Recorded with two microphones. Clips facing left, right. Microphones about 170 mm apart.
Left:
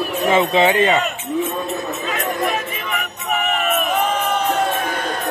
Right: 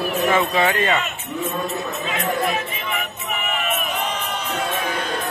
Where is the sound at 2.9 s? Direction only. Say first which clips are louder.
Left 3 dB; 45° left (ahead or behind).